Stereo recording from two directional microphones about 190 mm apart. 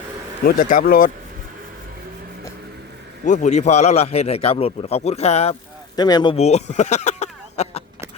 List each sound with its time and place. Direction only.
0.4 s speech: 45° left (ahead or behind)
3.2 s a man's voice: 40° left (ahead or behind)
6.0 s speech: 20° left (ahead or behind)
6.3 s a sound: 35° left (ahead or behind)